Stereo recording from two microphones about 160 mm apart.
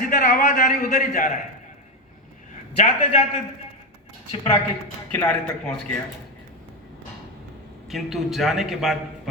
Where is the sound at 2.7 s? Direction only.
45° left (ahead or behind).